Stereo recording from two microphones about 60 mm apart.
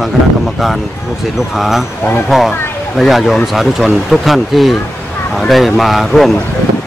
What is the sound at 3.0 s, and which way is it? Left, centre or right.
Speech, centre.